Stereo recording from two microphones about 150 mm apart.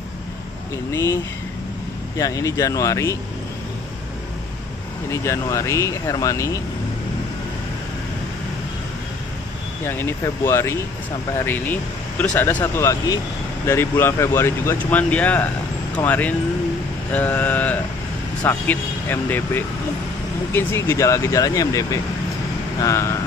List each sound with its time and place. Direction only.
0.9 s speech: 20° left (ahead or behind)
5.1 s speech: 20° left (ahead or behind)
9.8 s speech: 15° left (ahead or behind)